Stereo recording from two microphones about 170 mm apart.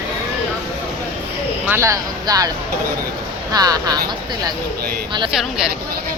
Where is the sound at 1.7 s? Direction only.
15° right (ahead or behind).